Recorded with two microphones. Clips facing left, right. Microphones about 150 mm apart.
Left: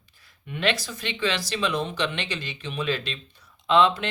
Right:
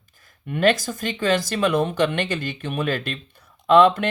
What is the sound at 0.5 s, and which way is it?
Speech, 45° right (ahead or behind).